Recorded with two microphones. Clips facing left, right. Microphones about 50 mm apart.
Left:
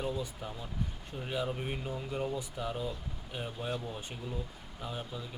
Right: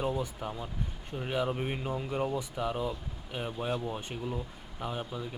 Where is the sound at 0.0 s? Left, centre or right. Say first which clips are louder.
Right 4 dB; right.